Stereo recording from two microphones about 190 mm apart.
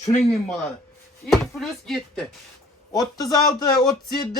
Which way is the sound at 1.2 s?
Centre (ahead or behind).